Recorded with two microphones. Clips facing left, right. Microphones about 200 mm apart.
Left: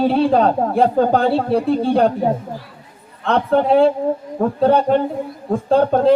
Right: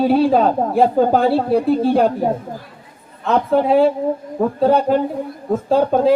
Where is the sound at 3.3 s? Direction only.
5° right (ahead or behind).